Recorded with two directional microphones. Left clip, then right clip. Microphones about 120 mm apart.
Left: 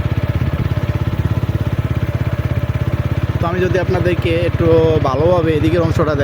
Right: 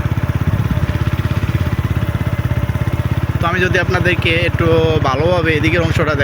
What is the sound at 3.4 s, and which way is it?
Speech, 35° left (ahead or behind).